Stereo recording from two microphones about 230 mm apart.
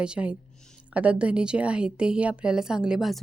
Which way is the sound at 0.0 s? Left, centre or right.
Centre.